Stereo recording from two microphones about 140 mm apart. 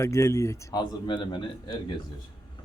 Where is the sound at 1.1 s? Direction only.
35° left (ahead or behind).